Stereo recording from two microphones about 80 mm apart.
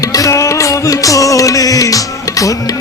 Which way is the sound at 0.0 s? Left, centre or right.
Left.